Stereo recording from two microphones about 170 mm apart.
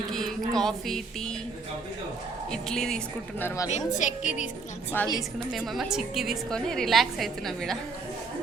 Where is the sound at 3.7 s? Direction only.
45° left (ahead or behind).